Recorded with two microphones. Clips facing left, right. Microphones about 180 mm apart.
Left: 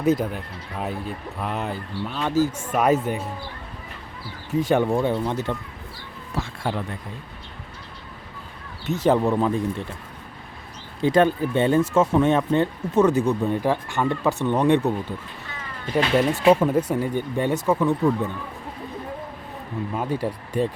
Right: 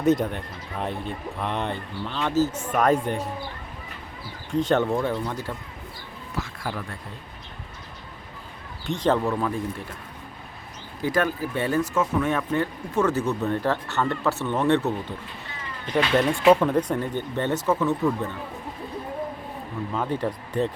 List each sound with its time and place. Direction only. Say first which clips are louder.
0.0 s speech: even; centre (ahead or behind)
4.5 s speech: left 2 dB; 10° left (ahead or behind)
5.0 s speech: left 4 dB; 25° left (ahead or behind)
8.9 s speech: left 3 dB; 10° left (ahead or behind)
11.0 s speech: left 6 dB; 25° left (ahead or behind)
16.5 s speech: even; 10° left (ahead or behind)
19.9 s speech: even; 10° left (ahead or behind)